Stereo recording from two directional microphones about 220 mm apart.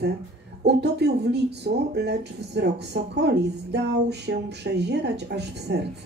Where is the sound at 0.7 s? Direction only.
50° right (ahead or behind).